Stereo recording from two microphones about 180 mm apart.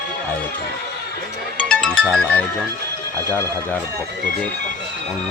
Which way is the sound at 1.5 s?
5° left (ahead or behind).